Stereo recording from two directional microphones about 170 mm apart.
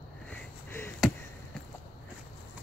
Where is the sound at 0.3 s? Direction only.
10° left (ahead or behind).